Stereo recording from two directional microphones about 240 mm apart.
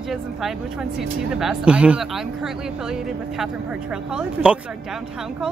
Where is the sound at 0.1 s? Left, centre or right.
Centre.